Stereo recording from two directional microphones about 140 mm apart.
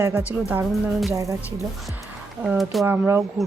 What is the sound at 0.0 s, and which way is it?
Speech, 10° right (ahead or behind).